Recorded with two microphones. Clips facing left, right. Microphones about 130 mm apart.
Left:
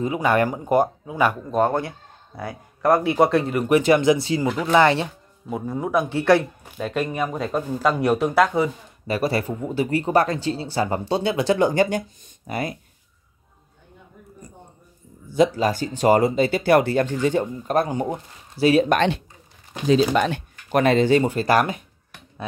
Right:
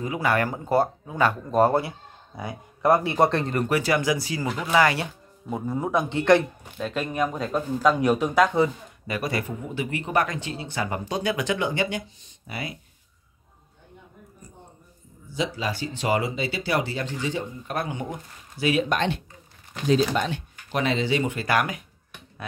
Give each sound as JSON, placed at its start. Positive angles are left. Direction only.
{"t": 0.0, "sound": "speech", "side_deg": 20}
{"t": 1.5, "sound": "speech", "side_deg": -5}
{"t": 3.6, "sound": "speech", "side_deg": 20}
{"t": 5.5, "sound": "speech", "side_deg": 0}
{"t": 9.0, "sound": "speech", "side_deg": 30}
{"t": 15.3, "sound": "speech", "side_deg": 45}
{"t": 18.9, "sound": "speech", "side_deg": 80}
{"t": 20.3, "sound": "speech", "side_deg": 50}
{"t": 21.2, "sound": "speech", "side_deg": 35}